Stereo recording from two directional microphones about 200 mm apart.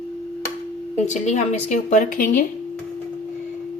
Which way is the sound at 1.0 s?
35° left (ahead or behind).